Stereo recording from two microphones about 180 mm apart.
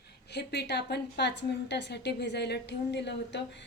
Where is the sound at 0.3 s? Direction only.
70° left (ahead or behind).